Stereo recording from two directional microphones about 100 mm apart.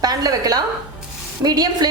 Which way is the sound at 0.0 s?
40° right (ahead or behind).